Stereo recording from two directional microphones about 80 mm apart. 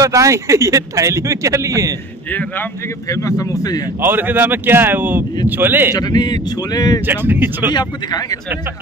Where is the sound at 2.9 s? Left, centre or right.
Left.